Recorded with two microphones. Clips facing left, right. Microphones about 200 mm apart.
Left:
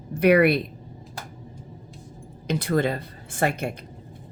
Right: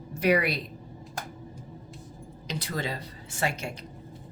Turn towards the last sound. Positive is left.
turn(degrees=55)  # may be behind; listen again after turning